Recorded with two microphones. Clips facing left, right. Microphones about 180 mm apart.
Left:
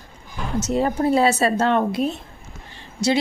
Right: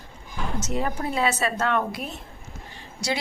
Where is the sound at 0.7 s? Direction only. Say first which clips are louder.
Left 9 dB; 35° left (ahead or behind).